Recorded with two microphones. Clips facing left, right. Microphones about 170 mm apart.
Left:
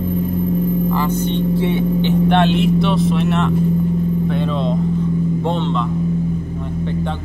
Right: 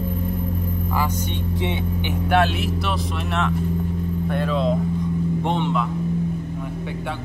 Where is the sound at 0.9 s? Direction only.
10° right (ahead or behind).